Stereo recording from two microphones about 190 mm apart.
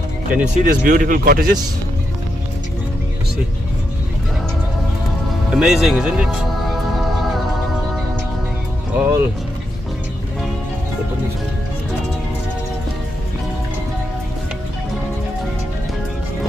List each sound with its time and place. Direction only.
0.4 s speech: 40° right (ahead or behind)
5.5 s speech: 5° right (ahead or behind)
8.9 s speech: 10° right (ahead or behind)